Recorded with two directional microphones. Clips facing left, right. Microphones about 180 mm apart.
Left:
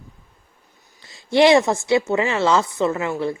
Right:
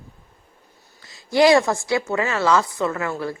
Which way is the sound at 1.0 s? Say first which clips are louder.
Left 1 dB; 25° left (ahead or behind).